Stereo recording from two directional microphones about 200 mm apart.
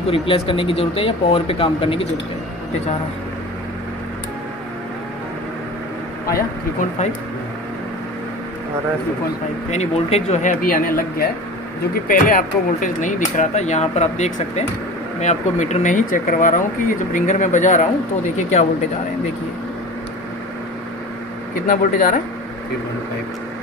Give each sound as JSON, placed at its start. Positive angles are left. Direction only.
{"t": 0.1, "sound": "speech", "side_deg": 25}
{"t": 6.8, "sound": "speech", "side_deg": 40}
{"t": 9.7, "sound": "speech", "side_deg": 30}
{"t": 21.6, "sound": "speech", "side_deg": 40}